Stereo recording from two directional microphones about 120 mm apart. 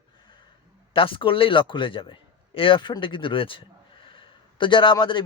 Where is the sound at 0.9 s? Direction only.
45° left (ahead or behind).